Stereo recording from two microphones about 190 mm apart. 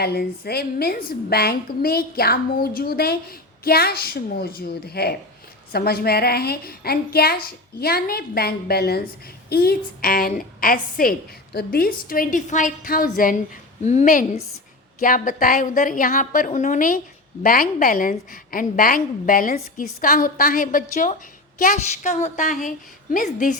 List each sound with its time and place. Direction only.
0.0 s a woman's voice: 55° left (ahead or behind)